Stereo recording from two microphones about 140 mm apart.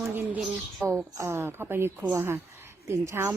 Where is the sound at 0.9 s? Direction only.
15° right (ahead or behind).